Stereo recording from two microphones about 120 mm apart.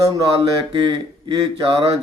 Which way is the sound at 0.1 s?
45° right (ahead or behind).